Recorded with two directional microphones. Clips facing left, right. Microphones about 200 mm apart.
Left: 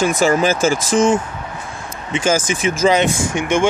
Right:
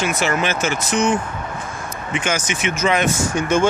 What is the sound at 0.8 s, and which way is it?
Speech, 90° left.